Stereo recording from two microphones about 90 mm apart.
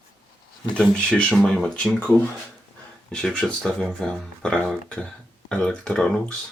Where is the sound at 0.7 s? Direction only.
15° left (ahead or behind).